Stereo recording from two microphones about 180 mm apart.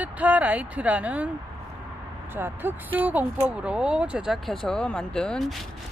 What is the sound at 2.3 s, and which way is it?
Speech, 10° right (ahead or behind).